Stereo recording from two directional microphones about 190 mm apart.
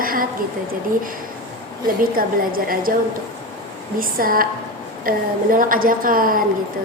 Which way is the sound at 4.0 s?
50° right (ahead or behind).